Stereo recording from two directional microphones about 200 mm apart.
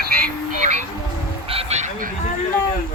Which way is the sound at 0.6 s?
35° right (ahead or behind).